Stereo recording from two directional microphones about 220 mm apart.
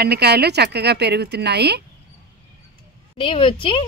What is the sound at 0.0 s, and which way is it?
Speech, 45° right (ahead or behind).